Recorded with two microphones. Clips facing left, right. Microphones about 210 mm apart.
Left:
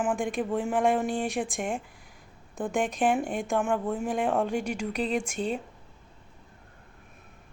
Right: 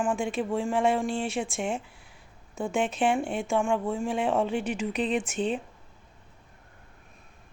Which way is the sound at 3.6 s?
5° left (ahead or behind).